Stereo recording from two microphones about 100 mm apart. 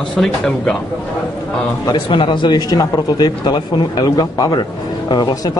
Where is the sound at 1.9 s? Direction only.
55° left (ahead or behind).